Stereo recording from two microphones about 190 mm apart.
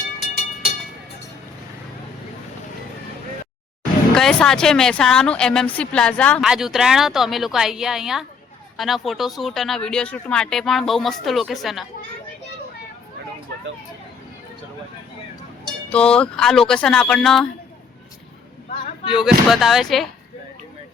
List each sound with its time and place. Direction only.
4.1 s speech: 5° left (ahead or behind)
15.9 s speech: 5° left (ahead or behind)
19.0 s speech: centre (ahead or behind)